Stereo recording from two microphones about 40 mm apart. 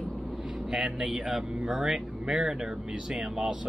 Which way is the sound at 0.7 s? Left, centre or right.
Centre.